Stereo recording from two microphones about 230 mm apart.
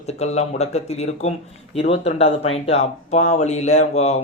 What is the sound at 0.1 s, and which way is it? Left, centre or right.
Speech, left.